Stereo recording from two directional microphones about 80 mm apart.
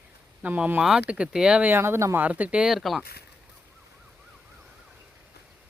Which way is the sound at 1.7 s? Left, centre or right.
Right.